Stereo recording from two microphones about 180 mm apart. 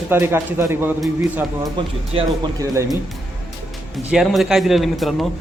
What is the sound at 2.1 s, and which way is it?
Speech, 20° right (ahead or behind).